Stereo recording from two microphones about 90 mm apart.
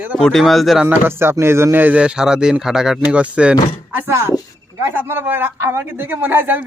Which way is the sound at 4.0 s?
30° right (ahead or behind).